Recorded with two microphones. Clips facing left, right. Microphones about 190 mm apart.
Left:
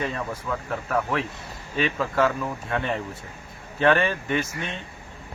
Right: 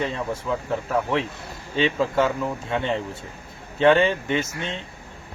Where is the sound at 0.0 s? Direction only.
25° right (ahead or behind).